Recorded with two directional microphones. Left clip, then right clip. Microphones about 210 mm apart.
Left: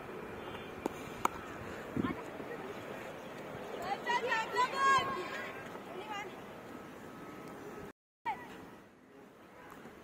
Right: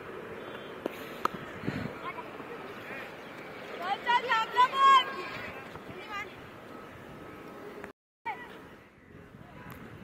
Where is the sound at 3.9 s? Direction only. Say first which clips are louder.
Right 7 dB; 35° right (ahead or behind).